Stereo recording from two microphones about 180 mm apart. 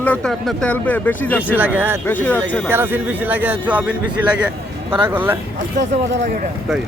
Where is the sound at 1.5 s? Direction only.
10° right (ahead or behind).